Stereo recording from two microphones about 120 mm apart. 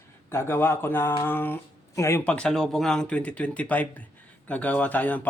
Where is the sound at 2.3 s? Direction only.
5° left (ahead or behind).